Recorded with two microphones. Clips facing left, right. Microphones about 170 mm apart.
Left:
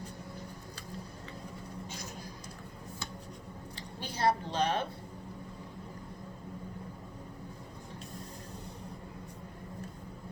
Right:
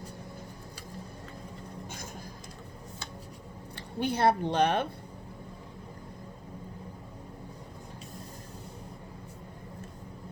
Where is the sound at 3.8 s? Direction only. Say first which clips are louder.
Right 8 dB; 60° right (ahead or behind).